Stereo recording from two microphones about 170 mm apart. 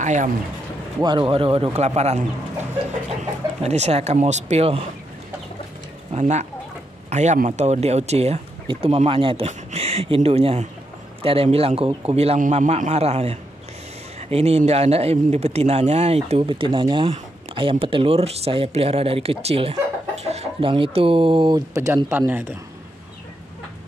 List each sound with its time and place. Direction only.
0.0 s speech: 45° right (ahead or behind)
0.9 s speech: 25° right (ahead or behind)
3.6 s speech: 40° right (ahead or behind)
6.1 s speech: 45° right (ahead or behind); by 22.5 s 15° right (ahead or behind)